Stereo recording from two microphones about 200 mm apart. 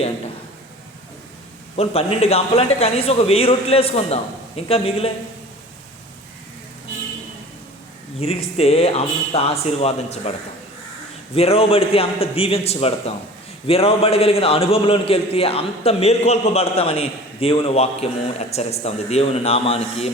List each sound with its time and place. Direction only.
1.7 s a man's voice: 30° left (ahead or behind)
8.2 s speech: 30° left (ahead or behind)
11.3 s a man's voice: 30° left (ahead or behind)